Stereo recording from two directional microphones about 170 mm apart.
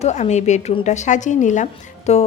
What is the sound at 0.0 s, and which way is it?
A woman's voice, 40° left (ahead or behind).